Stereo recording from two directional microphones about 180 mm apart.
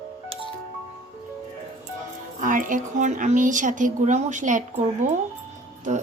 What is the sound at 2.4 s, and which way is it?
Speech, 45° right (ahead or behind).